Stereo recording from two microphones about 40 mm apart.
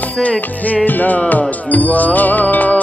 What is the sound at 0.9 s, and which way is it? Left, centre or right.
Music, left.